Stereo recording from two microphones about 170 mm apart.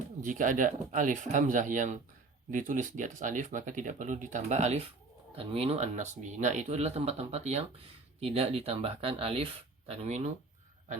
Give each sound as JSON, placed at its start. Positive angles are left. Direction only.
{"t": 0.2, "sound": "speech", "side_deg": -50}